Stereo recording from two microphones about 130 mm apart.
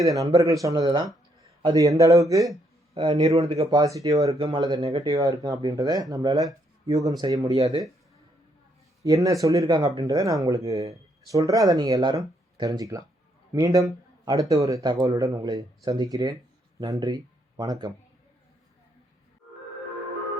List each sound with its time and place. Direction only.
0.0 s speech: 25° right (ahead or behind)
2.9 s speech: 35° right (ahead or behind)
5.0 s speech: 30° right (ahead or behind)
7.5 s speech: 50° right (ahead or behind)
9.0 s speech: 25° right (ahead or behind)